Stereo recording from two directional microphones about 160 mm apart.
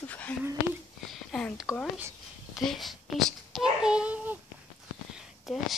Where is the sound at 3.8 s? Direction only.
5° right (ahead or behind).